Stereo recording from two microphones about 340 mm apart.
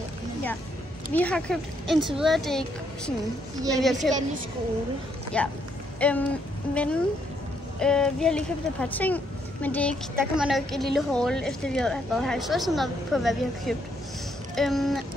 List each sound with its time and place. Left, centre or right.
1.1 s speech: centre
3.7 s speech: centre
5.3 s speech: centre
5.9 s a sound: centre
6.7 s speech: centre